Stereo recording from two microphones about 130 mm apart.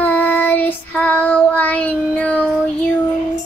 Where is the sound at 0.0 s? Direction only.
10° left (ahead or behind).